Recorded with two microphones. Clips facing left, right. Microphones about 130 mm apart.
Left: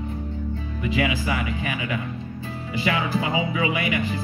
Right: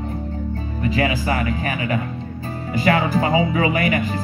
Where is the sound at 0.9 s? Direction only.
40° right (ahead or behind).